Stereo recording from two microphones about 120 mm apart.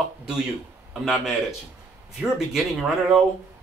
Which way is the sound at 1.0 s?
Centre (ahead or behind).